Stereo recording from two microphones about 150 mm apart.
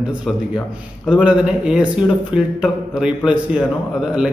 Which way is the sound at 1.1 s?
5° right (ahead or behind).